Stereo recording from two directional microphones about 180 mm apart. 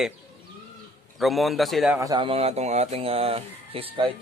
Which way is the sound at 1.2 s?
Centre (ahead or behind).